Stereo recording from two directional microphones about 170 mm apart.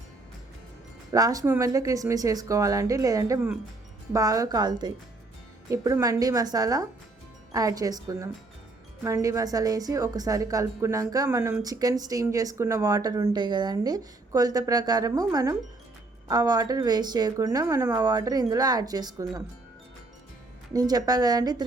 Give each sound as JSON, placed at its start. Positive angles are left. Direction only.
{"t": 1.1, "sound": "a woman's voice", "side_deg": -20}
{"t": 20.7, "sound": "a woman's voice", "side_deg": -20}